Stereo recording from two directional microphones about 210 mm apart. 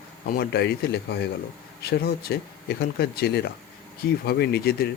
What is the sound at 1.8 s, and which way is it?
Speech, 50° left (ahead or behind).